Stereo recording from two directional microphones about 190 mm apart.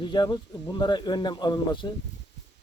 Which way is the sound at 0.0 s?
25° left (ahead or behind).